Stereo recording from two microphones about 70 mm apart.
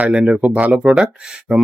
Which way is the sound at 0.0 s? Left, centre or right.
Centre.